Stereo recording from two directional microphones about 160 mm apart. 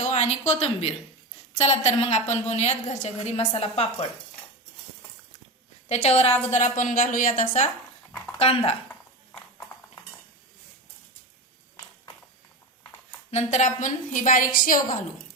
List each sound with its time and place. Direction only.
0.0 s a woman's voice: 45° left (ahead or behind)
5.9 s a woman's voice: 45° left (ahead or behind)
8.4 s a woman's voice: 40° left (ahead or behind)
8.9 s clip-clop: 5° left (ahead or behind)
13.3 s a woman's voice: 50° left (ahead or behind)